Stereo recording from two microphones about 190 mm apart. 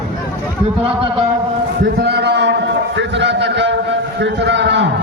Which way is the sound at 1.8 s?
60° right (ahead or behind).